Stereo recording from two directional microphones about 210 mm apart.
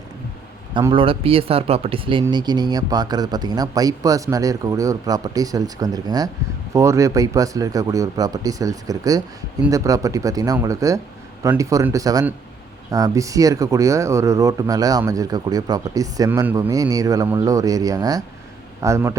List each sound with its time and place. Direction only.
0.7 s speech: 25° right (ahead or behind)